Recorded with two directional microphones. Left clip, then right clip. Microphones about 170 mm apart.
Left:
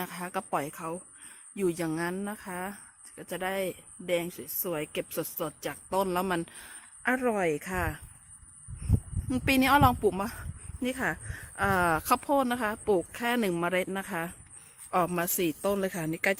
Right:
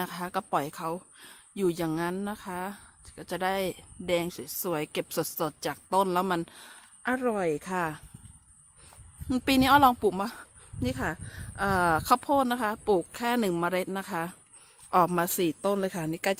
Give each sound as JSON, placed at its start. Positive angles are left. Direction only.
{"t": 0.0, "sound": "a woman's voice", "side_deg": -20}
{"t": 7.0, "sound": "speech", "side_deg": -15}
{"t": 9.3, "sound": "a woman's voice", "side_deg": -35}
{"t": 11.9, "sound": "a woman's voice", "side_deg": -25}
{"t": 13.2, "sound": "speech", "side_deg": -30}
{"t": 13.7, "sound": "a woman's voice", "side_deg": -20}